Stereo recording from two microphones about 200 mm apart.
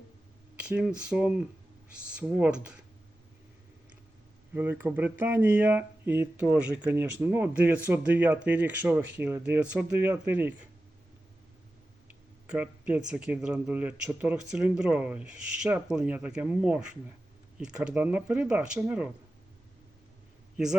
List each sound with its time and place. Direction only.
0.5 s speech: 5° right (ahead or behind)
4.5 s speech: 10° right (ahead or behind)
12.0 s speech: 5° right (ahead or behind)